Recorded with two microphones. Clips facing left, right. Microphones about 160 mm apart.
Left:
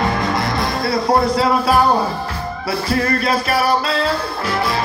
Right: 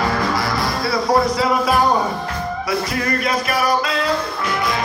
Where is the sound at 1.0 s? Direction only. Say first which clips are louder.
Left 1 dB; 25° left (ahead or behind).